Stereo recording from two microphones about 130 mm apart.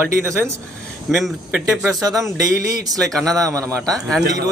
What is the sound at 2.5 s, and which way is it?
Speech, 30° right (ahead or behind).